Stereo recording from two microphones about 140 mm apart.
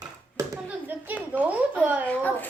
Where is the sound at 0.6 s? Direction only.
15° right (ahead or behind).